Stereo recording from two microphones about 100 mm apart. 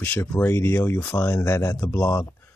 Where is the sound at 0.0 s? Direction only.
20° left (ahead or behind).